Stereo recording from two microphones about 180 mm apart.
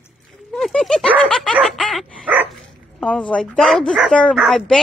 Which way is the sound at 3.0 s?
5° left (ahead or behind).